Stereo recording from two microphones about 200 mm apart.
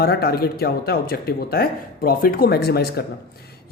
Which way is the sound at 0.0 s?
50° left (ahead or behind).